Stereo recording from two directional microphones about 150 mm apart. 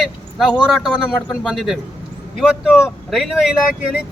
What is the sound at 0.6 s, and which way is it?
Speech, 5° left (ahead or behind).